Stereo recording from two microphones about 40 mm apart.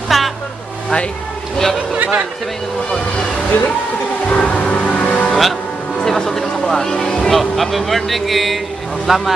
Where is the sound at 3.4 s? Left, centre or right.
Left.